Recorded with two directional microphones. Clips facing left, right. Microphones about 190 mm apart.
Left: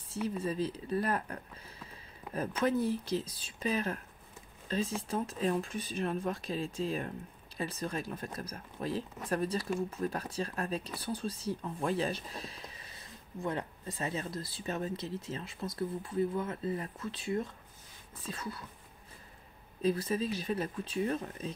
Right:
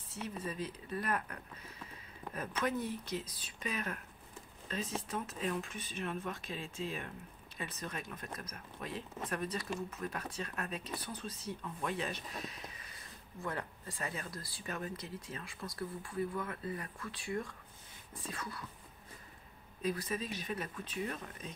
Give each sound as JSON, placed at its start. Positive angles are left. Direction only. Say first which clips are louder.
{"t": 0.4, "sound": "speech", "louder": "left 7 dB", "side_deg": 30}
{"t": 19.8, "sound": "speech", "louder": "left 6 dB", "side_deg": 30}